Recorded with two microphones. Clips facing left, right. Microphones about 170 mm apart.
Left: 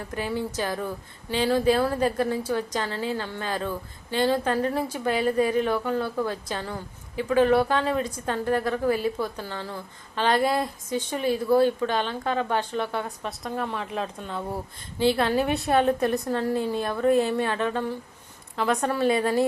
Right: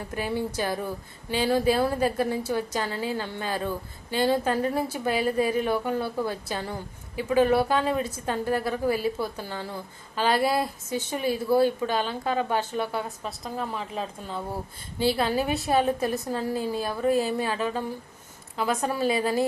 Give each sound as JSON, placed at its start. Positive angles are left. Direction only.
{"t": 0.2, "sound": "a woman's voice", "side_deg": -10}